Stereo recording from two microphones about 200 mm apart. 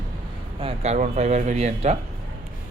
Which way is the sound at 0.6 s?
35° right (ahead or behind).